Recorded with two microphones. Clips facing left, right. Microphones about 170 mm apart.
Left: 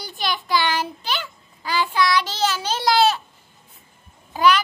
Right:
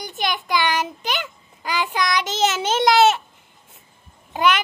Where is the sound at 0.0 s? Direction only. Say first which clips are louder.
Right 2 dB; 20° right (ahead or behind).